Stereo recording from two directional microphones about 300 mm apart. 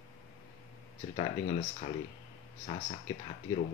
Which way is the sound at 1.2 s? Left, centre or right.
Centre.